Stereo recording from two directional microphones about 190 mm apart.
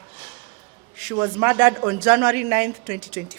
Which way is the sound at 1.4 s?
10° right (ahead or behind).